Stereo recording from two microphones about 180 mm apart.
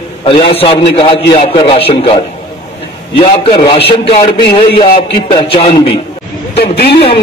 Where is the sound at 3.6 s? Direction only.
30° left (ahead or behind).